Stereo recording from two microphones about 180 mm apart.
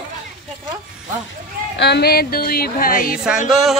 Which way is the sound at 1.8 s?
65° left (ahead or behind).